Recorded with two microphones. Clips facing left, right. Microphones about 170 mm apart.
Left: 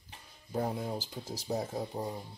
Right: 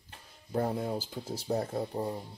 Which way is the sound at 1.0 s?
30° right (ahead or behind).